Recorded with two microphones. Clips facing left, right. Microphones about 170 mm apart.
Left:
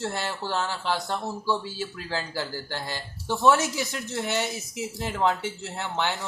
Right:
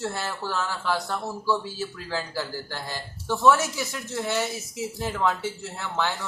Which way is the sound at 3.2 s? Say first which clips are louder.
Right 1 dB; 20° left (ahead or behind).